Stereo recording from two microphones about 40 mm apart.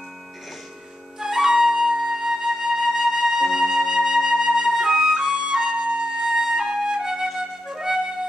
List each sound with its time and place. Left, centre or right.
1.2 s flute: centre
5.4 s flute: right
6.2 s flute: centre